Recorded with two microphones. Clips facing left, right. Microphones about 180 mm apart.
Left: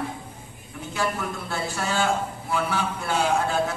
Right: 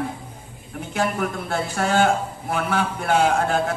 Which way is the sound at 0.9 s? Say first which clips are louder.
Right 4 dB; 55° right (ahead or behind).